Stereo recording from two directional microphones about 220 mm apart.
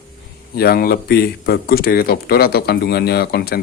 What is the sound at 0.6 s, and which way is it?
Speech, 45° left (ahead or behind).